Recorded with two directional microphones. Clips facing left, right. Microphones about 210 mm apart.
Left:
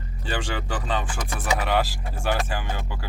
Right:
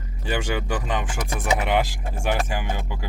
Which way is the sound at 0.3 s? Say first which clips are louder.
Right 4 dB; 10° right (ahead or behind).